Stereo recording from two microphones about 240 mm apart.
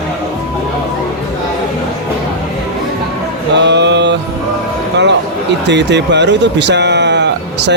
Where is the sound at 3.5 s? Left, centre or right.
Right.